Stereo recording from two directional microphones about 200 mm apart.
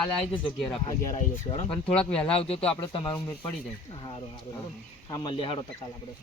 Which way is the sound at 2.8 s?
25° left (ahead or behind).